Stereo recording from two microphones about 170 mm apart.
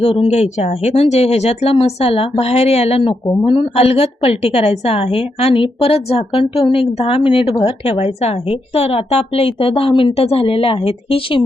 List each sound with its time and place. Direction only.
0.0 s a woman's voice: 35° left (ahead or behind)